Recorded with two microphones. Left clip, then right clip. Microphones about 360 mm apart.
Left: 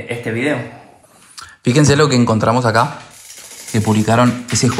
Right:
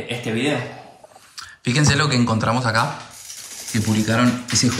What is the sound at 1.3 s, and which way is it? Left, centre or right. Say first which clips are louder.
A man's voice: left 7 dB; centre.